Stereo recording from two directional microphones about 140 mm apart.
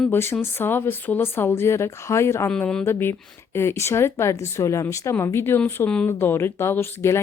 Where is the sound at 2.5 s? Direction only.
5° left (ahead or behind).